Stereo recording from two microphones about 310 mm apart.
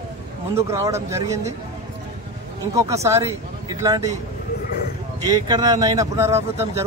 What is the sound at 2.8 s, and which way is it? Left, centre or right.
A man's voice, centre.